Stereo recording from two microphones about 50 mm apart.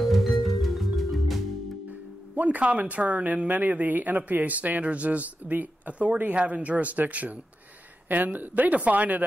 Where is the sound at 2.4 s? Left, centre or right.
Right.